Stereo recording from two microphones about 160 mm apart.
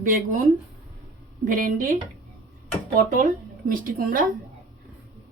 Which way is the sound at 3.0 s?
55° right (ahead or behind).